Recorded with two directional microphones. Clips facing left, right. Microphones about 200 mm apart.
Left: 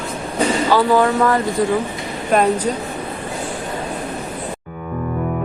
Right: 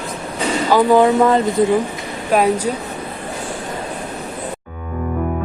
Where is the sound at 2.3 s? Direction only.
10° right (ahead or behind).